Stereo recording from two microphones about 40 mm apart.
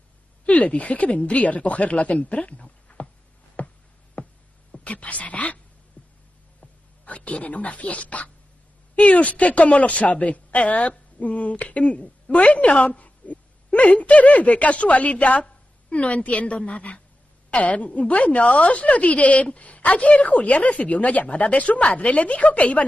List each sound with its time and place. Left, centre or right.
0.5 s a woman's voice: left
3.5 s a sound: left
4.7 s speech: left
6.0 s heart sounds: left
6.6 s a woman's voice: left
12.6 s a sound: left
13.9 s a woman's voice: left